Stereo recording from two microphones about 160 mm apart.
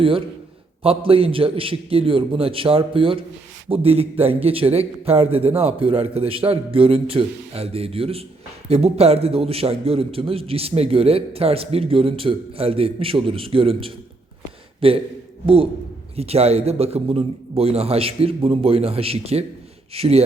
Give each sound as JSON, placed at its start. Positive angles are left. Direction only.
{"t": 0.8, "sound": "a man's voice", "side_deg": -35}
{"t": 16.1, "sound": "a man's voice", "side_deg": -40}